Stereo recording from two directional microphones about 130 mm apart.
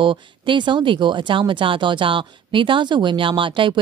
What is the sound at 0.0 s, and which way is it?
Speech, 40° right (ahead or behind).